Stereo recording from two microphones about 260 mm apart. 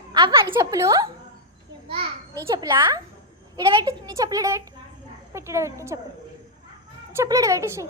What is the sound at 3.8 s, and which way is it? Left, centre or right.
Speech, centre.